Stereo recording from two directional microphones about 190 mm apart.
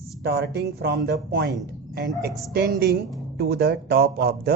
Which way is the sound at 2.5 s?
55° right (ahead or behind).